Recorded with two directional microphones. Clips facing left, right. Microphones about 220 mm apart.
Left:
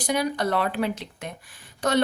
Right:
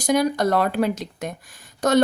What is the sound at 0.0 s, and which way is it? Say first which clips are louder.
Speech: right 5 dB; 45° right (ahead or behind).